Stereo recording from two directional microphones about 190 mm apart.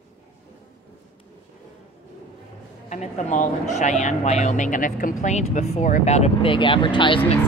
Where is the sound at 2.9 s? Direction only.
40° left (ahead or behind).